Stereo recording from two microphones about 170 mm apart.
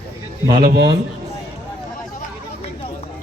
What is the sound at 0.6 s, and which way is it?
Speech, 60° right (ahead or behind).